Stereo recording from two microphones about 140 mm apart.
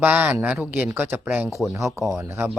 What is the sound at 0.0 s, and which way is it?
Speech, 10° right (ahead or behind).